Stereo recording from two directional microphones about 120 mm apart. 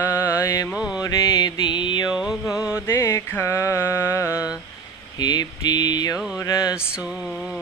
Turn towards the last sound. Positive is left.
turn(degrees=-5)  # may be behind; listen again after turning